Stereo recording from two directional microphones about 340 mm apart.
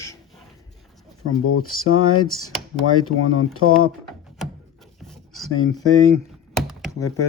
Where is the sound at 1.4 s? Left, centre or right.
Left.